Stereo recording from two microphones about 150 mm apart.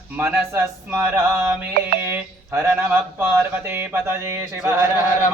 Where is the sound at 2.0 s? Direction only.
15° right (ahead or behind).